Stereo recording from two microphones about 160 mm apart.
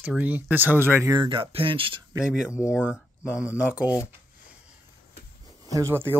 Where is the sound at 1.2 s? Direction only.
35° right (ahead or behind).